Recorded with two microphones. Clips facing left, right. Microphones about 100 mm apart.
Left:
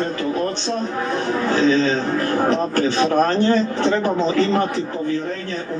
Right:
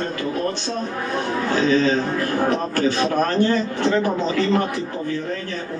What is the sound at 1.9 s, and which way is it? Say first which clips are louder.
A man's voice: left 1 dB; 20° left (ahead or behind).